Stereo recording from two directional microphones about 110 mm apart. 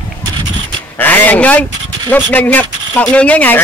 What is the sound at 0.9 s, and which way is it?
Speech, 15° left (ahead or behind).